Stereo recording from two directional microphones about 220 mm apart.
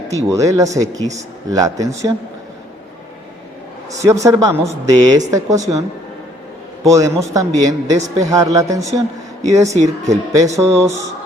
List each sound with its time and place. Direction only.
0.3 s a man's voice: 15° right (ahead or behind)
3.9 s a man's voice: 15° right (ahead or behind)
6.8 s a man's voice: 15° right (ahead or behind)
9.8 s speech: 30° right (ahead or behind)
10.5 s a man's voice: 15° right (ahead or behind)